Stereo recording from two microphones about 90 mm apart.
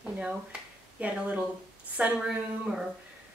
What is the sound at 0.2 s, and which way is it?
Speech, 10° right (ahead or behind).